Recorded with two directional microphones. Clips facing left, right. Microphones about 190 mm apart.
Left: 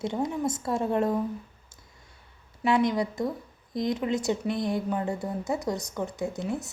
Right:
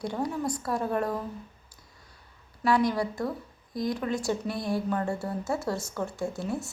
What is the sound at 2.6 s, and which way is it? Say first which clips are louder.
A woman's voice: left 1 dB; 20° left (ahead or behind).